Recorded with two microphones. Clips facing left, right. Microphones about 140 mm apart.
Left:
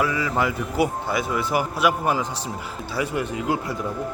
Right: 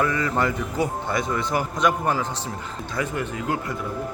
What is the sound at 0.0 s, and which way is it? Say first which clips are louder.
Speech: even; 5° left (ahead or behind).